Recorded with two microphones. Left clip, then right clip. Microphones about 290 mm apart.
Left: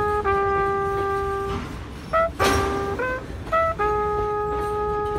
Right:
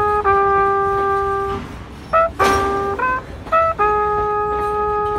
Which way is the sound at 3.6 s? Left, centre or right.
Centre.